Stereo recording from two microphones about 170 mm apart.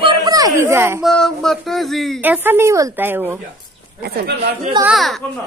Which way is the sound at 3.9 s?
65° right (ahead or behind).